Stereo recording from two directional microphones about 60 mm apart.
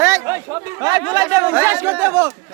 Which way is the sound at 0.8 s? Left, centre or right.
Right.